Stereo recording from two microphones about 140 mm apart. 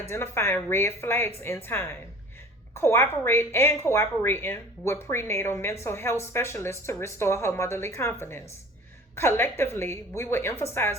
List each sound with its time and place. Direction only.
0.1 s a woman's voice: 20° left (ahead or behind)